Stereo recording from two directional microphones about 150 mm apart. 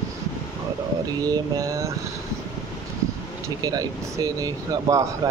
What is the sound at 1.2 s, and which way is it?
Speech, 25° right (ahead or behind).